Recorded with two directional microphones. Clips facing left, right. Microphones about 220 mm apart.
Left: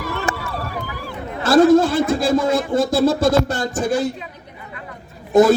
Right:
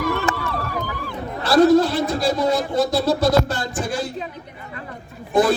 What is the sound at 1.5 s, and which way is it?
A man's voice, 50° left (ahead or behind).